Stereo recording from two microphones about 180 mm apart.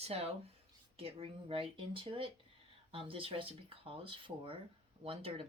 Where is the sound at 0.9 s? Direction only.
30° right (ahead or behind).